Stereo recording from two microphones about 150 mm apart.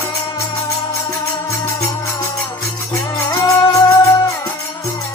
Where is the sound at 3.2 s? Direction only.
20° left (ahead or behind).